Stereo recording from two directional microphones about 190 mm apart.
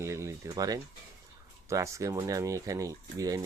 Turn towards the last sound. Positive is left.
turn(degrees=-15)  # may be behind; listen again after turning